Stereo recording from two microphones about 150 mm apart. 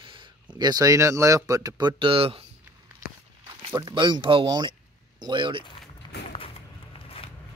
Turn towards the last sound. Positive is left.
turn(degrees=35)  # may be behind; listen again after turning